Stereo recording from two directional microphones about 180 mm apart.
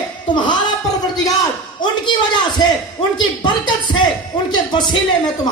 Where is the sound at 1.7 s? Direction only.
25° left (ahead or behind).